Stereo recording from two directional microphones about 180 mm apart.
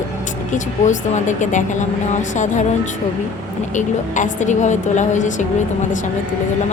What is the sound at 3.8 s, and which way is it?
A woman's voice, 45° left (ahead or behind).